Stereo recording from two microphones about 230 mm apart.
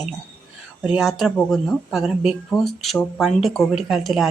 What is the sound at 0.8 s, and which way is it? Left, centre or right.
Speech, centre.